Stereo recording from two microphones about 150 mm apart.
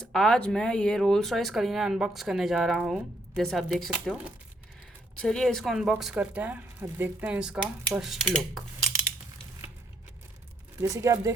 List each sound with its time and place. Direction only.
0.1 s speech: 5° left (ahead or behind)
5.2 s speech: 5° left (ahead or behind)
10.8 s speech: 20° right (ahead or behind)